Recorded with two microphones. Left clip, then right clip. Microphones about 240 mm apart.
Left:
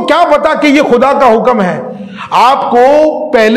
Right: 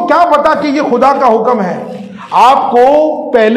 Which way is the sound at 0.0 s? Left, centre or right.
Left.